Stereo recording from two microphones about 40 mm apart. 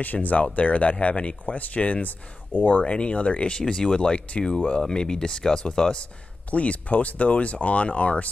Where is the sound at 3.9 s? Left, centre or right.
Left.